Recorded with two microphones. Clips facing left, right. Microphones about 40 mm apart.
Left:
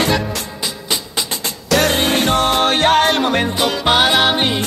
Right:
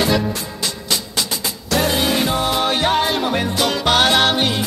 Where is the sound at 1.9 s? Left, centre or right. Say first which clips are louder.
Left 3 dB; left.